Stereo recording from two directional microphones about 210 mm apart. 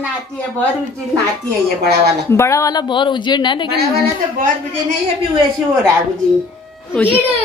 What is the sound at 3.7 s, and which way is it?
Speech, 45° right (ahead or behind).